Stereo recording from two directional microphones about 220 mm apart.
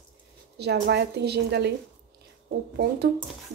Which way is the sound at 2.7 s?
50° right (ahead or behind).